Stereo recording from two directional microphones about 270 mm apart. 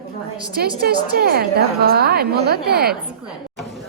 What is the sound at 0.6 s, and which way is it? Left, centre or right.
A woman's voice, right.